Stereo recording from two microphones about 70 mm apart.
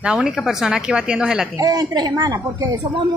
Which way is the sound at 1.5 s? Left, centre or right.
Right.